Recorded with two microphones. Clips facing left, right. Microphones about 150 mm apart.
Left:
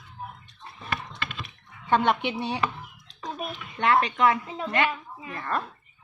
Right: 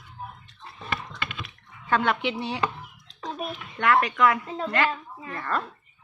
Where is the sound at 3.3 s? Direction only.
Centre (ahead or behind).